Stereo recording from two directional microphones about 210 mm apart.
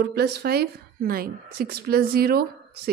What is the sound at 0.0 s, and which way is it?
A woman's voice, 50° right (ahead or behind).